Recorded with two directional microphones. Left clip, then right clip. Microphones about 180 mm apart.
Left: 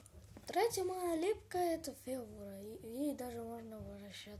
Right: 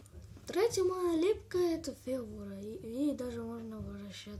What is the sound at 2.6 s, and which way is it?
Speech, 15° left (ahead or behind).